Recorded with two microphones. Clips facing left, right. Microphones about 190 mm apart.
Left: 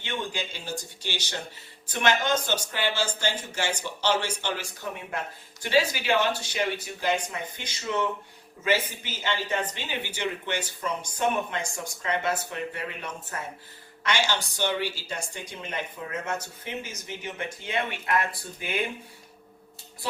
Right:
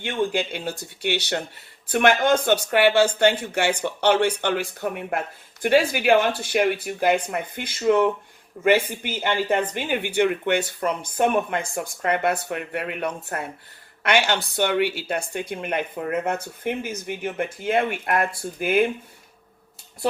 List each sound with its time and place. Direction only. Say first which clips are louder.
0.0 s a woman's voice: right 9 dB; 60° right (ahead or behind)